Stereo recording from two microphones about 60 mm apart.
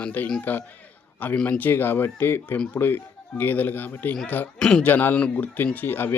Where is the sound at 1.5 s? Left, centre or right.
Left.